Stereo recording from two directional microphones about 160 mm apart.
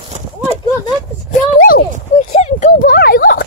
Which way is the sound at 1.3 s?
65° left (ahead or behind).